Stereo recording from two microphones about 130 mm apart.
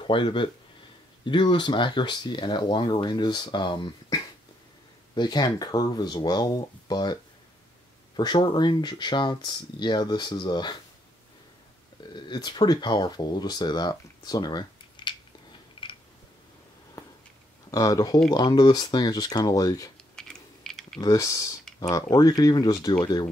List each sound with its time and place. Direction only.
0.0 s speech: 40° left (ahead or behind)
8.2 s speech: 35° left (ahead or behind)
12.3 s speech: 35° left (ahead or behind)
15.8 s a sound: 40° left (ahead or behind)
17.6 s speech: 25° left (ahead or behind)
20.2 s typing: 5° left (ahead or behind)
21.0 s speech: 25° left (ahead or behind)